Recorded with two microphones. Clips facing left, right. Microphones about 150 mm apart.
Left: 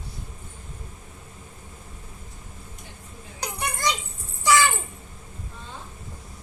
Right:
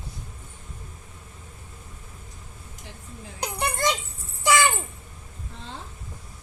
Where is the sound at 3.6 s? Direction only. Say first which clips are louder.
Right 3 dB; 25° right (ahead or behind).